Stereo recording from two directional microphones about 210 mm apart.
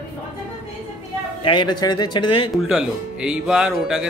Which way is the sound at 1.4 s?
20° left (ahead or behind).